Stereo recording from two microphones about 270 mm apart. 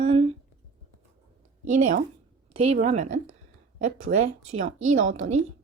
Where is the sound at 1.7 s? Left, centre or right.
Right.